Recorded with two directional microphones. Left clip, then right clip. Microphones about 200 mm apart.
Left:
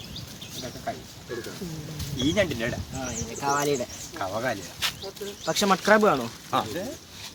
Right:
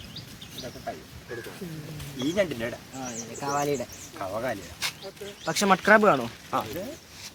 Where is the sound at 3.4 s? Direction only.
25° right (ahead or behind).